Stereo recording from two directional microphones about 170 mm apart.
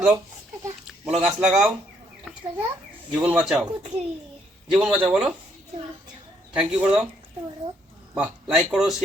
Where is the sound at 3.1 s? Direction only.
10° right (ahead or behind).